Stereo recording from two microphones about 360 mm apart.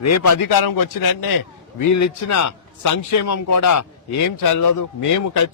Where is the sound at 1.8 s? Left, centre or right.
Left.